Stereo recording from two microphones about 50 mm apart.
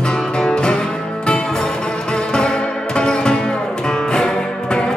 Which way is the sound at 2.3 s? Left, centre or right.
Centre.